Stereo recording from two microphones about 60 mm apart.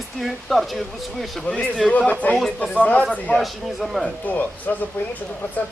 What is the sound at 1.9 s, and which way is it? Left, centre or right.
Speech, left.